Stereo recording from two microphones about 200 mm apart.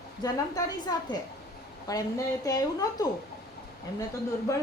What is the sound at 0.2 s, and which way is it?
A woman's voice, 20° left (ahead or behind).